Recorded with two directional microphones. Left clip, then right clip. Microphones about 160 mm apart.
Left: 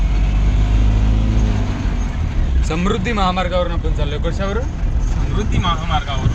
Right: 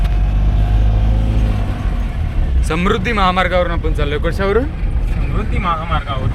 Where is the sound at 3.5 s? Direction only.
15° right (ahead or behind).